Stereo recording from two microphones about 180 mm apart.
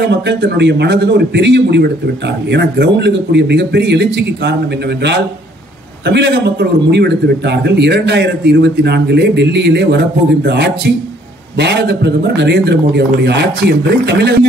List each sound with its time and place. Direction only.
0.0 s a man's voice: 70° right (ahead or behind)